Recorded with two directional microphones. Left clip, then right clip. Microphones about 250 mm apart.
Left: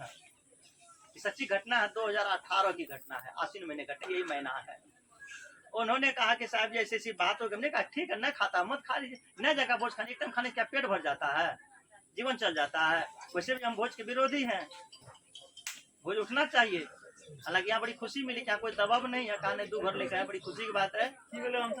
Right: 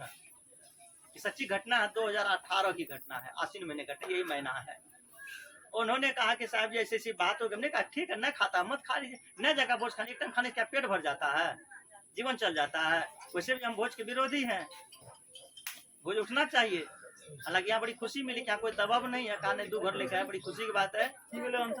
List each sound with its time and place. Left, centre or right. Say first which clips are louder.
1.1 s a man's voice: left 2 dB; centre
5.7 s a man's voice: left 1 dB; centre
16.0 s a man's voice: even; centre
21.3 s speech: even; right